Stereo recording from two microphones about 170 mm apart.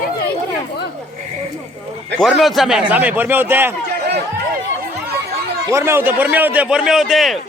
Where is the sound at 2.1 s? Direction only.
Centre (ahead or behind).